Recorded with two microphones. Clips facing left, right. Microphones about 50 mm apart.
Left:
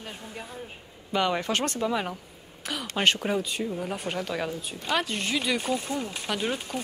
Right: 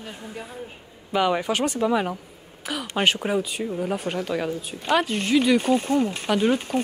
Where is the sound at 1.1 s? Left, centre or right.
Centre.